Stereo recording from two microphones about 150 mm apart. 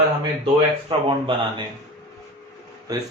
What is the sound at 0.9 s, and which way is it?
Speech, 35° right (ahead or behind).